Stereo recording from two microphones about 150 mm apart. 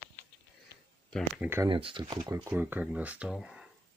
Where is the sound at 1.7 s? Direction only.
35° right (ahead or behind).